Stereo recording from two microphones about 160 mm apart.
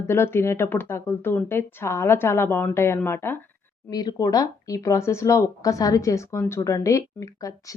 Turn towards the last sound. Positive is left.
turn(degrees=20)  # may be behind; listen again after turning